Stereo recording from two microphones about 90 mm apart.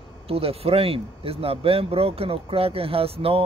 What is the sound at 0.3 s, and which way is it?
Speech, 90° right.